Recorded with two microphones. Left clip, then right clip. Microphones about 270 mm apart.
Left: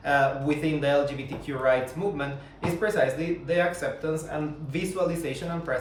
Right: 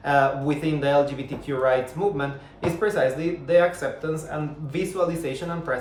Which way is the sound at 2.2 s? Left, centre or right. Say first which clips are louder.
Right 3 dB; centre.